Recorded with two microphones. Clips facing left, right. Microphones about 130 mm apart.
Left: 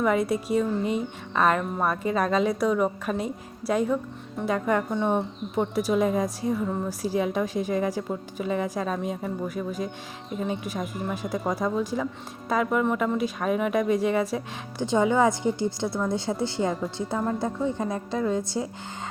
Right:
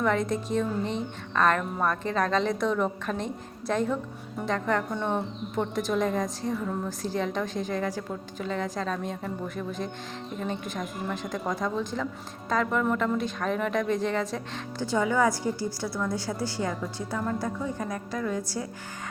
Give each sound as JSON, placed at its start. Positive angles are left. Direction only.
{"t": 0.0, "sound": "speech", "side_deg": 10}